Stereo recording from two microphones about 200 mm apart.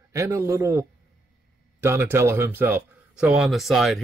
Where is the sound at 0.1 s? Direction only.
15° right (ahead or behind).